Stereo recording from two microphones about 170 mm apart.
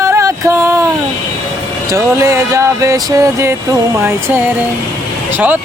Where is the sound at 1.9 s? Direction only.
15° right (ahead or behind).